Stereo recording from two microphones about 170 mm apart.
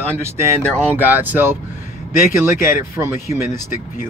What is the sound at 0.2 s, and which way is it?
Speech, 15° right (ahead or behind).